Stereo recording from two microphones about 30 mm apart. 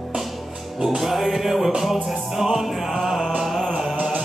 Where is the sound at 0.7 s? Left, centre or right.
Centre.